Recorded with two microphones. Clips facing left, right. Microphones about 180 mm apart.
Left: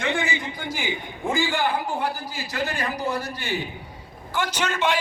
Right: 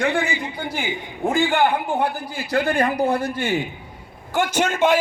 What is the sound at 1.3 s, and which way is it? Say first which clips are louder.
A man's voice: right 5 dB; 60° right (ahead or behind).